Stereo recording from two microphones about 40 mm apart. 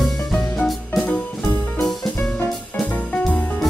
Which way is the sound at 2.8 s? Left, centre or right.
Left.